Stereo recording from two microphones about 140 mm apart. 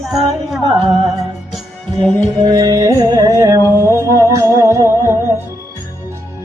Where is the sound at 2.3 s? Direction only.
30° right (ahead or behind).